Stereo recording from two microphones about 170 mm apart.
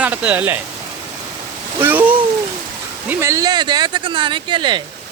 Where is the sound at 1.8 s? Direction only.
10° right (ahead or behind); by 4.8 s 30° right (ahead or behind).